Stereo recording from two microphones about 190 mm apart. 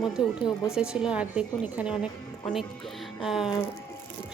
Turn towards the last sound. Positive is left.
turn(degrees=0)  # may be behind; listen again after turning